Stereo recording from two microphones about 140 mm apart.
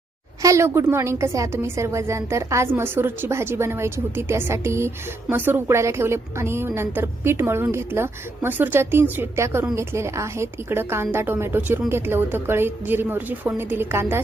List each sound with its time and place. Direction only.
0.4 s a woman's voice: 20° right (ahead or behind)